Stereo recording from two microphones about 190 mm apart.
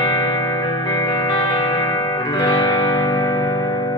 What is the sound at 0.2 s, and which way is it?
Music, 20° left (ahead or behind).